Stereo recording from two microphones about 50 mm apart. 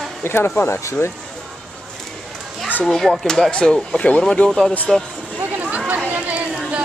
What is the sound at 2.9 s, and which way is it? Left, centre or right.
Speech, centre.